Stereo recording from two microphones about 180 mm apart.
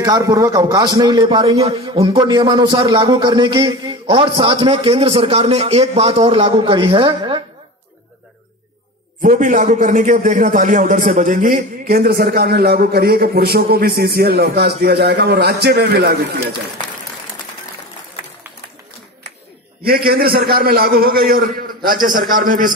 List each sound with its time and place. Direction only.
0.0 s a man's voice: 20° right (ahead or behind)
9.2 s a man's voice: 45° right (ahead or behind); by 16.4 s 60° right (ahead or behind)
20.1 s a man's voice: 55° right (ahead or behind)